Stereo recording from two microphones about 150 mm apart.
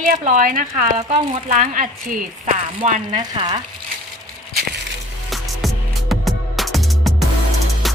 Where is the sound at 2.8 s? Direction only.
50° right (ahead or behind).